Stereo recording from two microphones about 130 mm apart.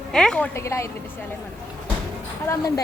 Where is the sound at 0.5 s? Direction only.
20° left (ahead or behind).